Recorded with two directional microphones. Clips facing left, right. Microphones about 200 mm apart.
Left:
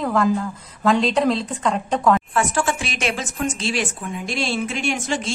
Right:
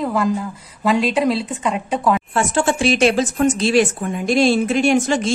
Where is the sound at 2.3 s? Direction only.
30° right (ahead or behind).